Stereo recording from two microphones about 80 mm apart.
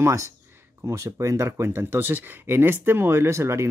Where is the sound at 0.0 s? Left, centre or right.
Right.